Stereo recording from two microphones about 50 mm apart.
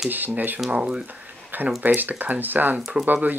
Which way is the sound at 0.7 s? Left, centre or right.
Right.